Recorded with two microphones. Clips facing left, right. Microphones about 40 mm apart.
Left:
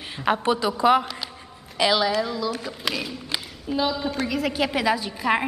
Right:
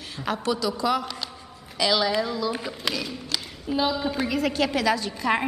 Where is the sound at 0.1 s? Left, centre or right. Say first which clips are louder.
Left 5 dB; left.